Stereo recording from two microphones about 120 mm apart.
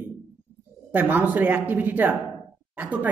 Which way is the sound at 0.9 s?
15° right (ahead or behind).